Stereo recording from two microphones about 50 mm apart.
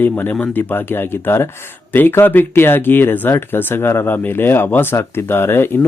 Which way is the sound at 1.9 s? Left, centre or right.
Left.